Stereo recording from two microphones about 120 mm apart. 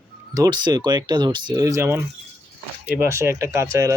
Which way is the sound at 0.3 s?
35° right (ahead or behind).